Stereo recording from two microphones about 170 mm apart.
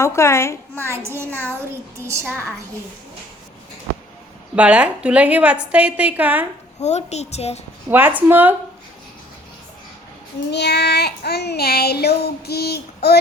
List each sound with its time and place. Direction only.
0.0 s a child's voice: 15° left (ahead or behind)
0.9 s a child's voice: 15° right (ahead or behind)
4.5 s a child's voice: 5° right (ahead or behind)
6.7 s a woman's voice: 40° left (ahead or behind)
7.9 s a child's voice: 10° right (ahead or behind)
10.5 s child singing: 80° left